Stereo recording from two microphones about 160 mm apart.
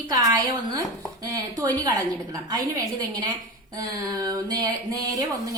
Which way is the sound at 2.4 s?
25° right (ahead or behind).